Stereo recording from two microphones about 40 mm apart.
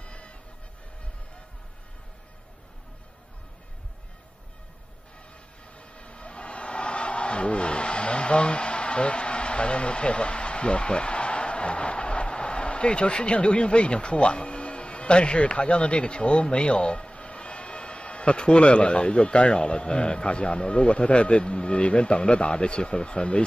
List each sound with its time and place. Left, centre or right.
0.0 s music: left
5.8 s vehicle: left